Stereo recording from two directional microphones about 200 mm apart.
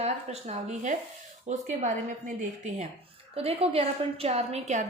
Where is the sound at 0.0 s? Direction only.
35° right (ahead or behind).